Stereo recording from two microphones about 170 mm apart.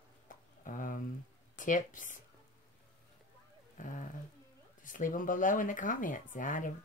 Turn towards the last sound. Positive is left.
turn(degrees=50)  # may be behind; listen again after turning